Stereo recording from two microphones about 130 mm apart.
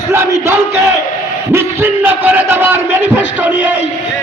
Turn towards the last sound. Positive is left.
turn(degrees=-15)  # may be behind; listen again after turning